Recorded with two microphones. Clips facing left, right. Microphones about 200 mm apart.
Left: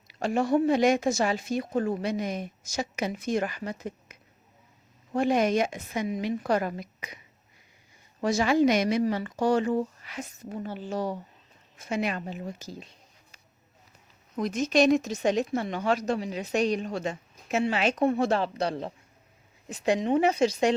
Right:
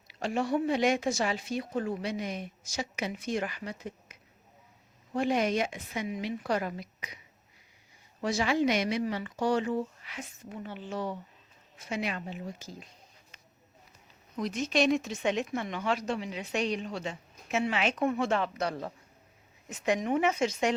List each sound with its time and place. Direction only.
0.1 s a woman's voice: 45° left (ahead or behind)
8.2 s a woman's voice: 45° left (ahead or behind)
14.3 s speech: 45° left (ahead or behind)